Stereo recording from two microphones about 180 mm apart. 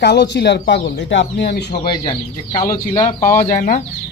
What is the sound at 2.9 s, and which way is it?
Speech, 15° left (ahead or behind).